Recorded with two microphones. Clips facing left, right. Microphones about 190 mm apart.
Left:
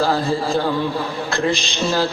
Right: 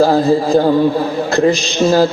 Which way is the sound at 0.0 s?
45° right (ahead or behind).